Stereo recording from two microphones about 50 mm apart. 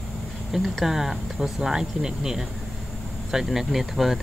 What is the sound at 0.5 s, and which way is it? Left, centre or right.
Speech, centre.